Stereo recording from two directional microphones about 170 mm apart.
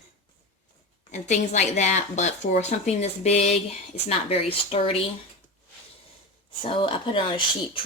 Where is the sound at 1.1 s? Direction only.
45° left (ahead or behind).